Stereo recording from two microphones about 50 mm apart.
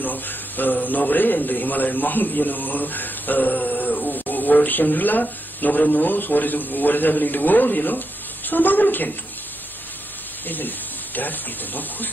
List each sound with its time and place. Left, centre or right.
0.0 s a man's voice: left
10.4 s a man's voice: left